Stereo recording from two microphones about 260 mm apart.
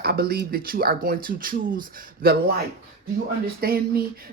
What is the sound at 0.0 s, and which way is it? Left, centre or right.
Speech, right.